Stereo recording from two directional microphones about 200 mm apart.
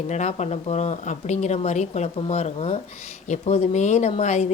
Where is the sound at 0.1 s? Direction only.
35° left (ahead or behind).